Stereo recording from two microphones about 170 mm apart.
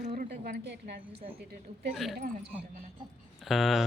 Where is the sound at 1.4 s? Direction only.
70° right (ahead or behind).